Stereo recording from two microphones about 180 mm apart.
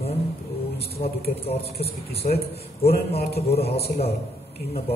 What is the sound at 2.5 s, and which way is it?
Speech, 60° left (ahead or behind).